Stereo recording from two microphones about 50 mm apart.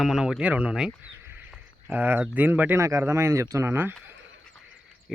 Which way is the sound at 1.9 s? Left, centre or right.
Right.